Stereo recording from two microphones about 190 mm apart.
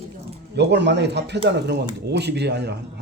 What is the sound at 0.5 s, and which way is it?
Speech, 65° right (ahead or behind).